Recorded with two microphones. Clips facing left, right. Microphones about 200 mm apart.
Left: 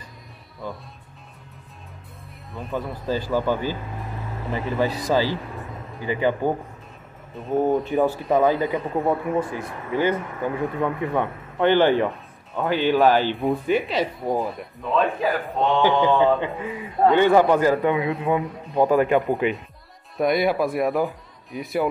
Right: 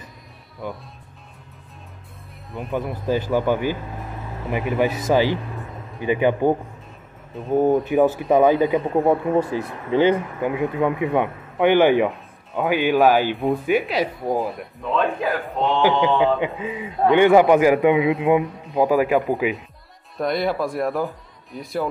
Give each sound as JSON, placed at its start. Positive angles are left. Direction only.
{"t": 2.7, "sound": "a man's voice", "side_deg": -20}
{"t": 7.3, "sound": "a man's voice", "side_deg": 0}
{"t": 7.9, "sound": "a man's voice", "side_deg": -20}
{"t": 13.4, "sound": "a man's voice", "side_deg": 0}
{"t": 16.2, "sound": "a man's voice", "side_deg": -15}
{"t": 18.4, "sound": "a man's voice", "side_deg": 0}